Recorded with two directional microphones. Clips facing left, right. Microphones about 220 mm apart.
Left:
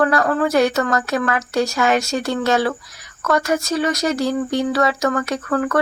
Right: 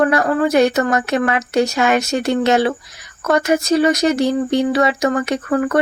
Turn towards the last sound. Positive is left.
turn(degrees=-20)  # may be behind; listen again after turning